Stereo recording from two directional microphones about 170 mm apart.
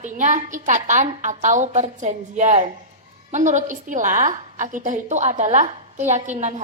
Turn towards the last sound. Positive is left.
turn(degrees=-45)  # may be behind; listen again after turning